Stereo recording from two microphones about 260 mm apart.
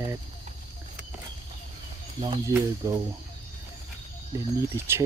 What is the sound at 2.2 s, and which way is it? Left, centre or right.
Speech, centre.